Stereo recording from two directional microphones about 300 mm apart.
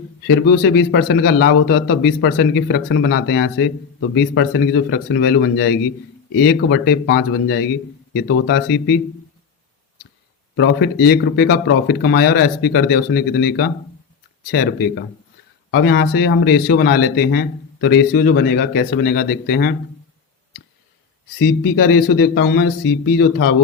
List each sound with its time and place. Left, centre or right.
0.9 s speech: left
10.6 s speech: left
21.3 s speech: left
21.9 s speech: left